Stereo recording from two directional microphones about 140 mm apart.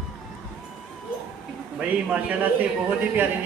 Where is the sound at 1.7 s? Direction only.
10° right (ahead or behind).